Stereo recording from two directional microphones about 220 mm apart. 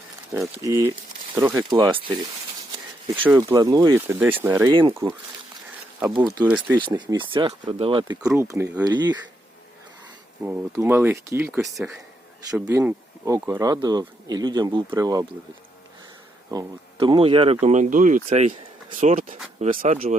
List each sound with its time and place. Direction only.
0.3 s speech: 15° right (ahead or behind)
3.2 s speech: 15° right (ahead or behind)
4.7 s speech: 20° right (ahead or behind)
6.1 s speech: 15° right (ahead or behind)
6.8 s speech: 20° right (ahead or behind)
8.4 s speech: 10° right (ahead or behind)
10.4 s speech: 10° right (ahead or behind)
11.6 s speech: centre (ahead or behind); by 15.3 s 15° right (ahead or behind)
16.5 s speech: 20° right (ahead or behind); by 20.0 s 35° right (ahead or behind)